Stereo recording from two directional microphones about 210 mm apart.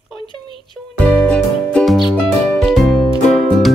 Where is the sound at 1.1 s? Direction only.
5° left (ahead or behind).